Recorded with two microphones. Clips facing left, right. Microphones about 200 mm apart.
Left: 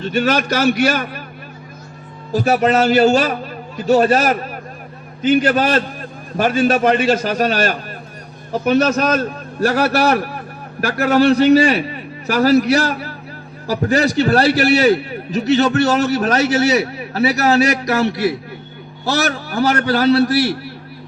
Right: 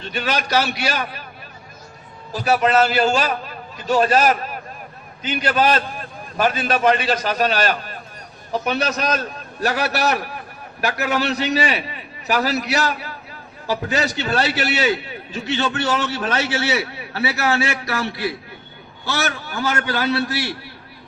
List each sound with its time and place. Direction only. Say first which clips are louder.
0.0 s a man's voice: left 7 dB; 40° left (ahead or behind)
2.3 s a man's voice: left 3 dB; 45° left (ahead or behind)
5.4 s a man's voice: left 3 dB; 45° left (ahead or behind)